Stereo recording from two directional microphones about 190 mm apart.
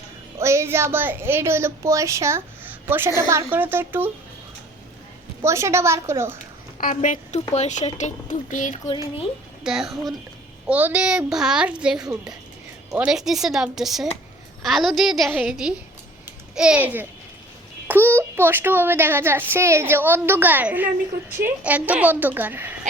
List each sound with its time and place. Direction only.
0.3 s a woman's voice: 15° right (ahead or behind)
5.4 s a woman's voice: 15° right (ahead or behind)
6.7 s a woman's voice: 40° left (ahead or behind)
9.6 s a woman's voice: centre (ahead or behind)